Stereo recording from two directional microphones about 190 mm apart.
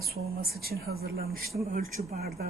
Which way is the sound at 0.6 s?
55° right (ahead or behind).